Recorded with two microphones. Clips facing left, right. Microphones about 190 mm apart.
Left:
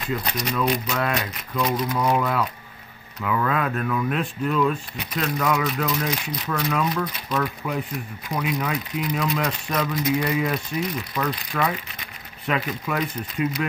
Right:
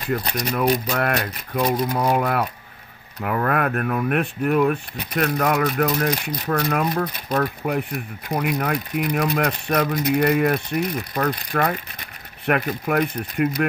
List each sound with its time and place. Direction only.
0.1 s speech: 60° right (ahead or behind)
1.9 s speech: 30° right (ahead or behind)
2.1 s speech: 55° right (ahead or behind)